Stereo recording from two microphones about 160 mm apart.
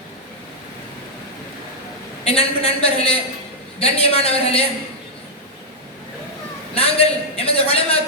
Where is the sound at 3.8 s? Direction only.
40° left (ahead or behind).